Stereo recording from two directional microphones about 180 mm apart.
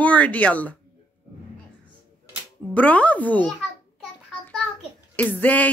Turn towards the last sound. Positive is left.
turn(degrees=10)  # may be behind; listen again after turning